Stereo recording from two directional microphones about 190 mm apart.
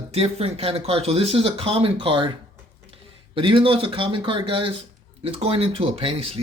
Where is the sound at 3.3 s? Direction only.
25° right (ahead or behind).